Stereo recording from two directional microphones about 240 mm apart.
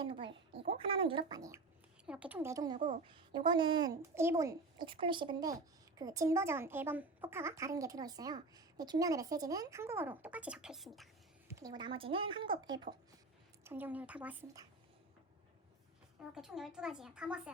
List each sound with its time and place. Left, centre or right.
0.0 s a woman's voice: right
2.7 s a woman's voice: right
3.1 s a woman's voice: centre
11.4 s a woman's voice: centre
16.3 s speech: centre